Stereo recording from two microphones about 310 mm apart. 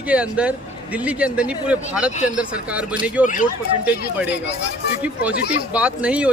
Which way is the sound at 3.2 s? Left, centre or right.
Left.